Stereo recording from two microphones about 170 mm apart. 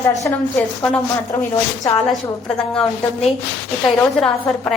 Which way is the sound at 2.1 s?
5° left (ahead or behind).